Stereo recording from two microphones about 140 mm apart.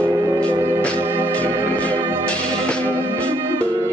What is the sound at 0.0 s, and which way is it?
Music, 15° right (ahead or behind).